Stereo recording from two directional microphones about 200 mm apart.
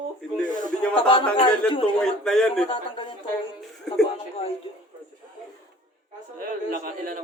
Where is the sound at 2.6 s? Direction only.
25° left (ahead or behind).